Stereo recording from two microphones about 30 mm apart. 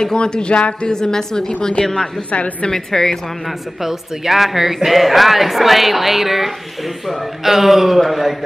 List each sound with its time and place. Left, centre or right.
0.0 s speech: left
0.9 s speech: left
2.3 s a woman's voice: left
2.7 s a woman's voice: centre
3.8 s speech: centre